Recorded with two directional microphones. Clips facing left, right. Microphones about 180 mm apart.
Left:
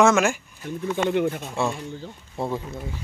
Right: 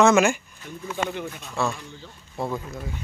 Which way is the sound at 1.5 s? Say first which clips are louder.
Left 2 dB; 25° left (ahead or behind).